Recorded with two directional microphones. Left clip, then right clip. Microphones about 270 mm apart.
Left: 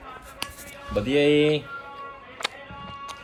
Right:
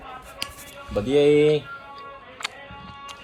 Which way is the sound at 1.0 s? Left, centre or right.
Right.